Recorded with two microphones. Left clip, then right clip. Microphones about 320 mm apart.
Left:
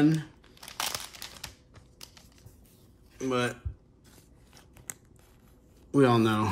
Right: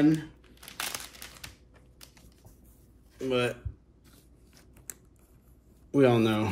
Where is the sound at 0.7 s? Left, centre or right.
Left.